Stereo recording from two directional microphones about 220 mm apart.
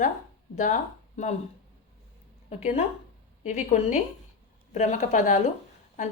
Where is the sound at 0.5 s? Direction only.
35° left (ahead or behind).